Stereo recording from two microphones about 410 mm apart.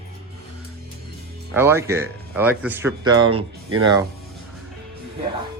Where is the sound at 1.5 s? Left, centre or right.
Centre.